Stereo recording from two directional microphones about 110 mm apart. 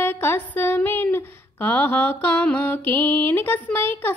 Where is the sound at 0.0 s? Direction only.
20° left (ahead or behind).